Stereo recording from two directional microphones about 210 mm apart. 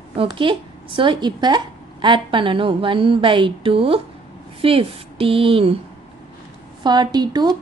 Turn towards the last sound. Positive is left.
turn(degrees=-20)  # may be behind; listen again after turning